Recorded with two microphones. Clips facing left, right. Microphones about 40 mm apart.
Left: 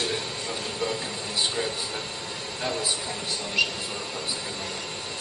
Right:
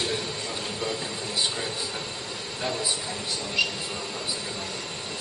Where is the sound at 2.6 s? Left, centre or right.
Centre.